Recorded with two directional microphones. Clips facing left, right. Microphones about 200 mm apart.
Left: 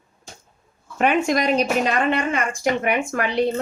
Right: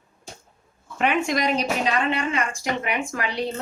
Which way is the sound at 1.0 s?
45° left (ahead or behind).